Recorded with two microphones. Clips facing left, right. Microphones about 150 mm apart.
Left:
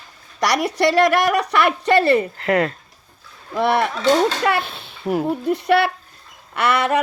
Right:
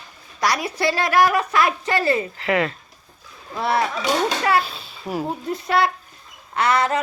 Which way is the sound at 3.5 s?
65° left (ahead or behind).